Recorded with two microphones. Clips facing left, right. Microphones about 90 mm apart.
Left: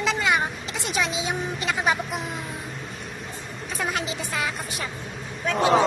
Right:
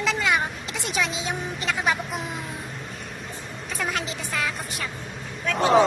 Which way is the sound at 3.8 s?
10° left (ahead or behind).